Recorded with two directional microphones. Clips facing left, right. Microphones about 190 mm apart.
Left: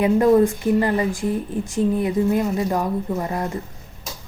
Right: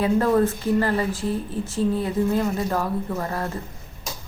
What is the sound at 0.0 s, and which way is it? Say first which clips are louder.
Speech: left 4 dB; 15° left (ahead or behind).